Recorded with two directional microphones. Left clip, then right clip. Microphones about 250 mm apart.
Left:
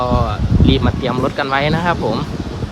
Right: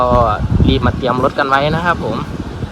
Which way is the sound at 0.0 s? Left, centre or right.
Centre.